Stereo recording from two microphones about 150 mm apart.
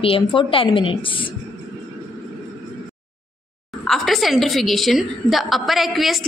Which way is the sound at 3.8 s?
Centre (ahead or behind).